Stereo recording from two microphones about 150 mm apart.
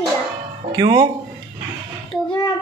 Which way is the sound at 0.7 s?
25° right (ahead or behind).